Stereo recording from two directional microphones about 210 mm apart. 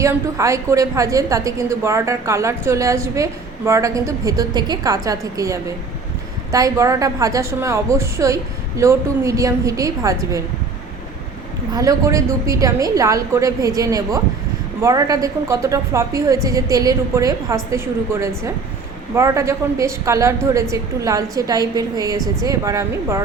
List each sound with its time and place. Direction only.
0.0 s a woman's voice: 15° right (ahead or behind)
11.7 s a woman's voice: 15° right (ahead or behind)